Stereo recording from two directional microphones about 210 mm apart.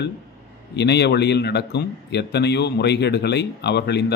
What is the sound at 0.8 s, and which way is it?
A man's voice, 55° left (ahead or behind).